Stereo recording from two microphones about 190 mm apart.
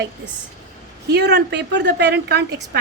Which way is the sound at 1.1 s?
60° right (ahead or behind).